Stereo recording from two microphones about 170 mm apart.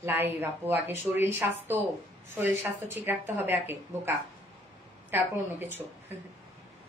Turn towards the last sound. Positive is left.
turn(degrees=-10)  # may be behind; listen again after turning